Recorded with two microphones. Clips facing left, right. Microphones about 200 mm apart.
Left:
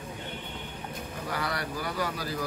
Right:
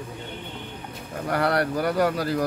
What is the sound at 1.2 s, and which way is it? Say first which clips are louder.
Speech: right 11 dB; 65° right (ahead or behind).